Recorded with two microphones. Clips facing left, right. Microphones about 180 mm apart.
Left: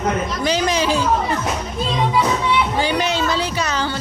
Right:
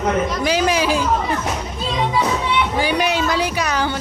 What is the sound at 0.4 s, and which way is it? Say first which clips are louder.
Speech: left 1 dB; 10° right (ahead or behind).